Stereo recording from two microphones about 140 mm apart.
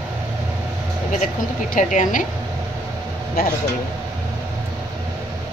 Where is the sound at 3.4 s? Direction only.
90° left.